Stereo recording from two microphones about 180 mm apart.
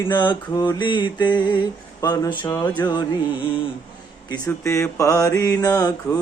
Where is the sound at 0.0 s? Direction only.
25° left (ahead or behind).